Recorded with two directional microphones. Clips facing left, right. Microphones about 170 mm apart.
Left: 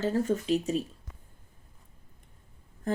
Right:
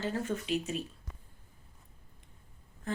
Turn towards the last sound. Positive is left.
turn(degrees=45)  # may be behind; listen again after turning